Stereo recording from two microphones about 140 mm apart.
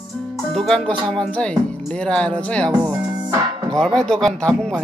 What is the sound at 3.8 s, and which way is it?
Music, 5° left (ahead or behind).